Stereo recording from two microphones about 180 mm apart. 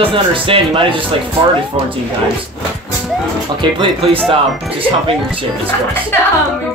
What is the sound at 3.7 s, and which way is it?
Speech, 30° right (ahead or behind).